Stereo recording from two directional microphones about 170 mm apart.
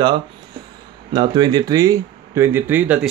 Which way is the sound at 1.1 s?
25° right (ahead or behind).